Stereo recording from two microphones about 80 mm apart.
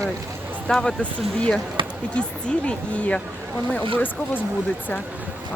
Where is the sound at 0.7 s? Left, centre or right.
Centre.